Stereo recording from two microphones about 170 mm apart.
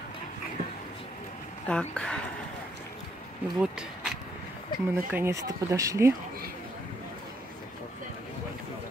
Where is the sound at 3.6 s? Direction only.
5° right (ahead or behind).